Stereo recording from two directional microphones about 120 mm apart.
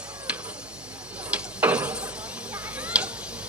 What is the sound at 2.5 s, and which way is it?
Tick-tock, 10° right (ahead or behind).